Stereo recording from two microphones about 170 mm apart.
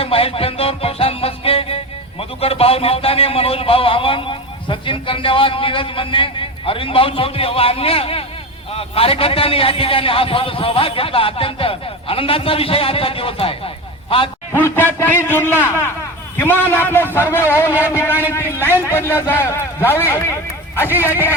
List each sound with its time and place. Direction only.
0.0 s music: 35° left (ahead or behind)
2.4 s a man's voice: 35° left (ahead or behind)
14.6 s a man's voice: 15° left (ahead or behind)
17.7 s speech: 10° right (ahead or behind)
18.3 s a man's voice: 15° left (ahead or behind)